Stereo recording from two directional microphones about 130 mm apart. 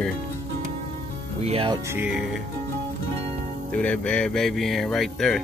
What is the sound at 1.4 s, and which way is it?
Speech, 50° right (ahead or behind).